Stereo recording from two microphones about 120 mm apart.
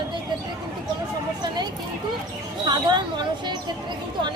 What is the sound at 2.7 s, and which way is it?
Speech, 35° right (ahead or behind).